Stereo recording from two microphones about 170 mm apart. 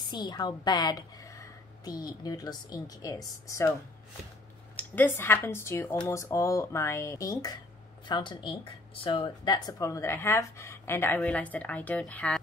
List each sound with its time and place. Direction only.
0.0 s a woman's voice: 25° left (ahead or behind)
4.7 s speech: 10° left (ahead or behind)